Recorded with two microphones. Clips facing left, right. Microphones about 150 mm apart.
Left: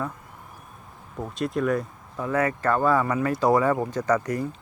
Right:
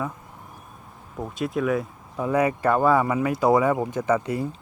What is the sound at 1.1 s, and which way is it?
Speech, 5° right (ahead or behind).